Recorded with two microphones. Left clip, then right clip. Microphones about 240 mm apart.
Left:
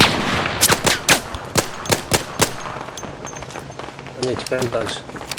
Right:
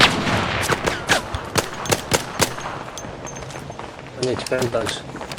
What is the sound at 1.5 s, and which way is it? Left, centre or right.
Gunshot, left.